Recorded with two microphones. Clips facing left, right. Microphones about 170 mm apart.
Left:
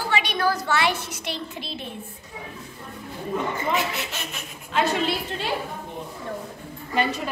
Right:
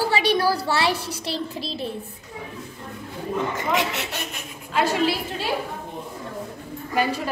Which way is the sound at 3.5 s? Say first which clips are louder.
Right 1 dB; 90° right.